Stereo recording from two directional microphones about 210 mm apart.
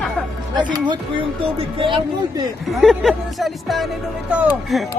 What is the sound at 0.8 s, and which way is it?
Speech, 25° right (ahead or behind).